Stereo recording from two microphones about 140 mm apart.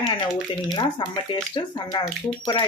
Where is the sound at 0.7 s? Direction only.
30° left (ahead or behind).